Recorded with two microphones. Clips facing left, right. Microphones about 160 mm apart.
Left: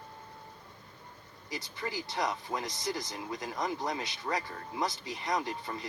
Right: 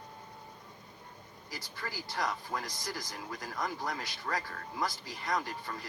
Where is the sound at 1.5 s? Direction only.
20° left (ahead or behind).